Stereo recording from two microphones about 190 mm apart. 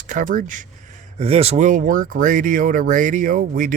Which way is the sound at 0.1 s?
45° right (ahead or behind).